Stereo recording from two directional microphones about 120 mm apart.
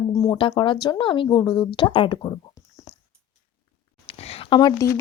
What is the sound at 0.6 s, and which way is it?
Speech, 40° left (ahead or behind).